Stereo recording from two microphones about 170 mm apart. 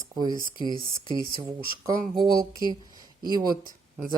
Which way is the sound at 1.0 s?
30° left (ahead or behind).